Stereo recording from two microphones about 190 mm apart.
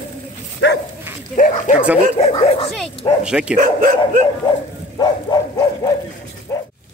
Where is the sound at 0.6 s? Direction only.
65° left (ahead or behind).